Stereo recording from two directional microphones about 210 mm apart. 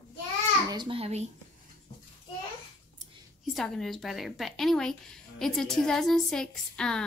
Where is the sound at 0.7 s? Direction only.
25° right (ahead or behind).